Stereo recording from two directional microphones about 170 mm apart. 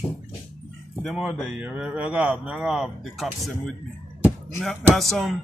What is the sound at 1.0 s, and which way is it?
Speech, centre (ahead or behind).